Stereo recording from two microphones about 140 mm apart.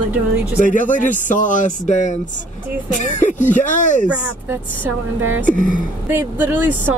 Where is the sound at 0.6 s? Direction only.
70° left (ahead or behind).